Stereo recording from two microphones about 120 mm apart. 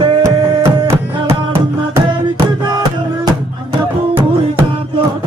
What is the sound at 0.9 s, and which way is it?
Music, 20° right (ahead or behind).